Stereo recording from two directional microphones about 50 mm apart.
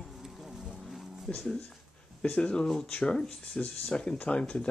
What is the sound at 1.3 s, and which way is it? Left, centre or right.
Speech, centre.